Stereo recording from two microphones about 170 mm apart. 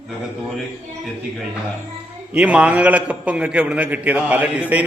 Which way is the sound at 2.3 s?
5° right (ahead or behind).